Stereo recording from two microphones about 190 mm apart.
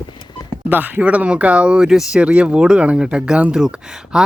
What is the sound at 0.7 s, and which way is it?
Speech, 10° right (ahead or behind).